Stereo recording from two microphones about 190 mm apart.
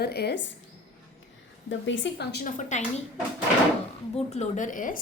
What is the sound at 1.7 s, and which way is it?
Speech, 75° left (ahead or behind).